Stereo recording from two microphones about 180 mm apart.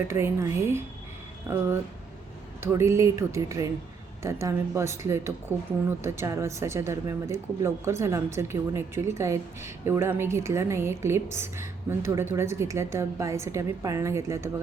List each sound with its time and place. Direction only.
0.1 s speech: 15° right (ahead or behind)